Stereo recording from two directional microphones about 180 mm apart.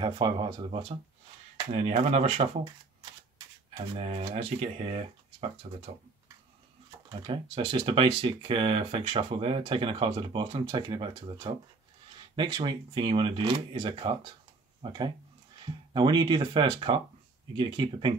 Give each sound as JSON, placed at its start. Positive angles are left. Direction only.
{"t": 0.0, "sound": "speech", "side_deg": -25}
{"t": 3.9, "sound": "speech", "side_deg": -35}
{"t": 7.1, "sound": "speech", "side_deg": -25}